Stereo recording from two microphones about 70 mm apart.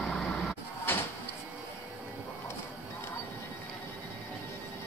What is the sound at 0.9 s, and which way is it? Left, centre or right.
Cupboard open or close, left.